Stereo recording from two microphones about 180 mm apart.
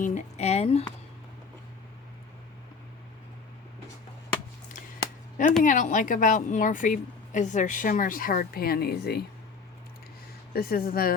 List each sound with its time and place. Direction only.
0.0 s speech: 40° left (ahead or behind)
5.6 s a woman's voice: 45° left (ahead or behind); by 9.2 s 60° left (ahead or behind)
10.5 s speech: 55° left (ahead or behind)